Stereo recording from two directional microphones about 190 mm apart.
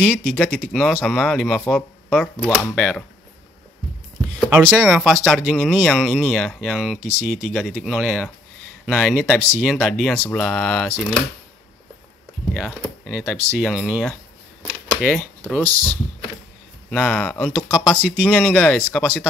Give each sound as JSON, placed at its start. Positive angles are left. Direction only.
{"t": 0.0, "sound": "speech", "side_deg": 5}
{"t": 4.5, "sound": "speech", "side_deg": -5}
{"t": 7.0, "sound": "speech", "side_deg": -35}
{"t": 7.4, "sound": "speech", "side_deg": 0}
{"t": 12.5, "sound": "speech", "side_deg": 0}
{"t": 15.4, "sound": "speech", "side_deg": 10}